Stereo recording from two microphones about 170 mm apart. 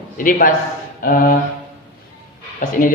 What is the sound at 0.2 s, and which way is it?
A man's voice, 55° left (ahead or behind).